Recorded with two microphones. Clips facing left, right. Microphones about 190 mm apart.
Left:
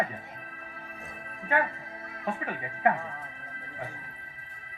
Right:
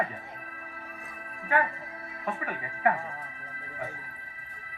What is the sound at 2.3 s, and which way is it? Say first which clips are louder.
Speech: left 1 dB; 25° left (ahead or behind).